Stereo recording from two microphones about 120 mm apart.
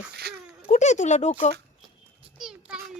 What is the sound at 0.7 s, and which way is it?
Speech, 85° left.